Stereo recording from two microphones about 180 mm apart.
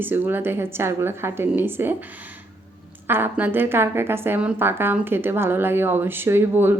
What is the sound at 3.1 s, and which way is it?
A woman's voice, 10° right (ahead or behind).